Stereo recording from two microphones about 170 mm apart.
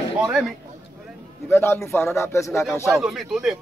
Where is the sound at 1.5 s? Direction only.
15° left (ahead or behind).